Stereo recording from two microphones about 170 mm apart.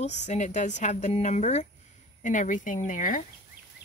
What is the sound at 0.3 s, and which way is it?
A woman's voice, 45° left (ahead or behind).